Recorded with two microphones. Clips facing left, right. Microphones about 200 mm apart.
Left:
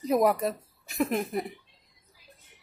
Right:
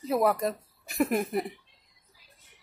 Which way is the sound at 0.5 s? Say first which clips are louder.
Even; centre (ahead or behind).